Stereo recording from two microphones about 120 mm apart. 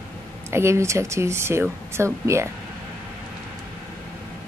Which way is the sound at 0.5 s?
25° right (ahead or behind).